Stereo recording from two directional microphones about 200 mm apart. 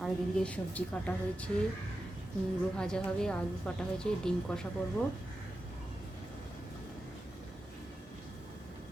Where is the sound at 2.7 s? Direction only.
5° left (ahead or behind).